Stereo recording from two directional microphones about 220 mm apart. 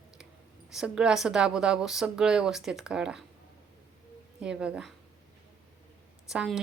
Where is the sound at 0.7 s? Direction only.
5° right (ahead or behind).